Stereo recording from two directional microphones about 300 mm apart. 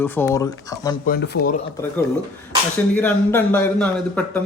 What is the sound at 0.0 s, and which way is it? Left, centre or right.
Speech, centre.